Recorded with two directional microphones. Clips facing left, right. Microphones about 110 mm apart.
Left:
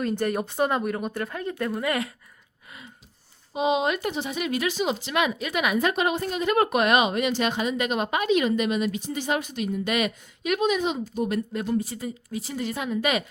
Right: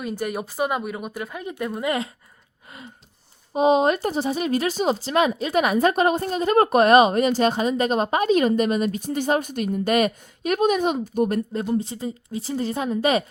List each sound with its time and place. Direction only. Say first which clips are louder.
0.0 s speech: left 2 dB; 5° right (ahead or behind)
3.5 s speech: right 6 dB; 45° right (ahead or behind)
11.7 s speech: right 1 dB; 25° right (ahead or behind)